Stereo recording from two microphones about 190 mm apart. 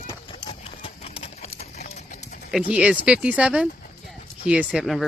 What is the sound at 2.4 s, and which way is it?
Speech, 5° right (ahead or behind).